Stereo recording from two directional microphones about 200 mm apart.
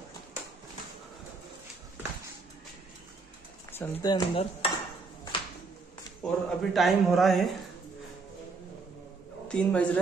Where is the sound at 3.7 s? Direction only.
20° left (ahead or behind).